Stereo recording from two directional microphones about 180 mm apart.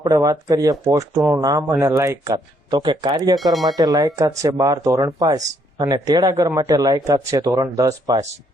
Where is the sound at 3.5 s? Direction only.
Centre (ahead or behind).